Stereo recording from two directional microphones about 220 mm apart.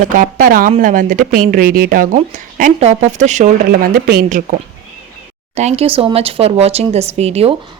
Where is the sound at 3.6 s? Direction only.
45° right (ahead or behind).